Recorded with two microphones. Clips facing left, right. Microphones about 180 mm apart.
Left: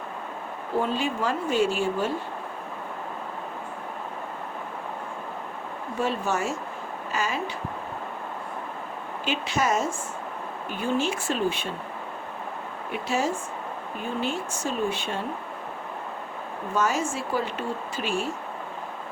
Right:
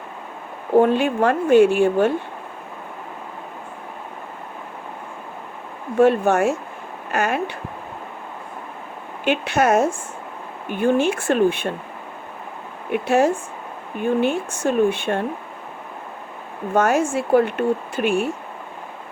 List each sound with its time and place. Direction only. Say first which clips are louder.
0.8 s speech: right 10 dB; 60° right (ahead or behind)
6.0 s speech: right 11 dB; 60° right (ahead or behind)
9.2 s speech: right 8 dB; 60° right (ahead or behind)
12.9 s speech: right 9 dB; 60° right (ahead or behind)
16.7 s speech: right 8 dB; 55° right (ahead or behind)